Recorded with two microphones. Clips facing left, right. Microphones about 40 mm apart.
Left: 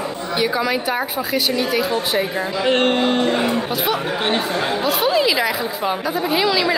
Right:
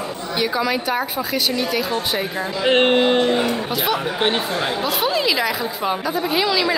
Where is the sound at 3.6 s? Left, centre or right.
Centre.